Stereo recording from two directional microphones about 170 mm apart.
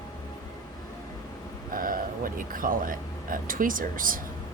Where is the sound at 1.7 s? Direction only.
55° right (ahead or behind).